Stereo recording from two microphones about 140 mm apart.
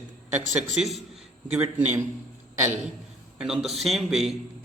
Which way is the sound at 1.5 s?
15° right (ahead or behind).